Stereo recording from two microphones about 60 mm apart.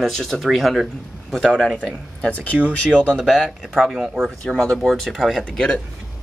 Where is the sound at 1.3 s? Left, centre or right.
Centre.